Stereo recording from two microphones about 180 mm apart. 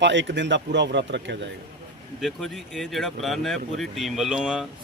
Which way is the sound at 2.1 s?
Centre (ahead or behind).